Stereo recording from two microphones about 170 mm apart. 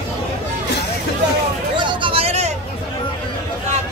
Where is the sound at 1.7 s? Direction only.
30° right (ahead or behind).